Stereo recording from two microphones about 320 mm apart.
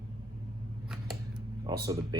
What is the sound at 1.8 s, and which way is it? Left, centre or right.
Speech, centre.